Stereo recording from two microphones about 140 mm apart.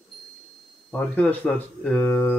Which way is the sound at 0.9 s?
10° left (ahead or behind).